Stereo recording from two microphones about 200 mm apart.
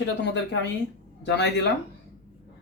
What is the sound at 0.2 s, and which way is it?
Speech, 60° left (ahead or behind).